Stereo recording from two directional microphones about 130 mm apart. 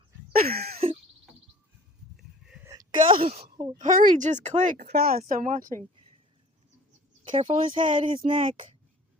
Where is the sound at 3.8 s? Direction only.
90° right.